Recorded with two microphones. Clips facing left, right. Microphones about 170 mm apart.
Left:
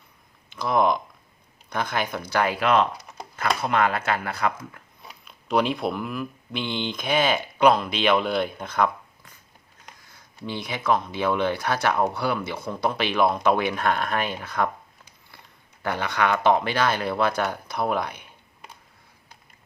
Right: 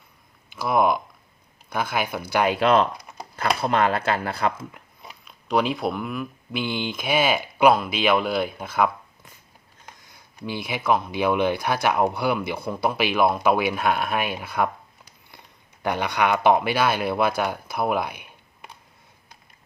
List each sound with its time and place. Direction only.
0.5 s speech: 5° right (ahead or behind)
2.6 s speech: 30° right (ahead or behind)
5.2 s speech: centre (ahead or behind)
10.1 s speech: 10° right (ahead or behind)
15.8 s speech: 15° right (ahead or behind)